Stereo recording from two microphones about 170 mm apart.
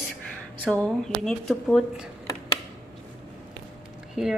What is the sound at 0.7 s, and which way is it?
Speech, 5° left (ahead or behind).